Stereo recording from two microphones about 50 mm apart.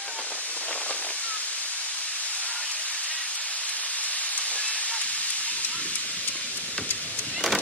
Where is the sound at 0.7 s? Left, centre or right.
Left.